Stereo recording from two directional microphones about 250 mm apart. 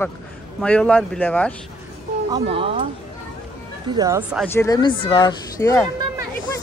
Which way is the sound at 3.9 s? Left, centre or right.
Centre.